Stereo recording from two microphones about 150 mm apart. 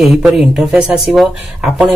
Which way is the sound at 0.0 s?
Centre (ahead or behind).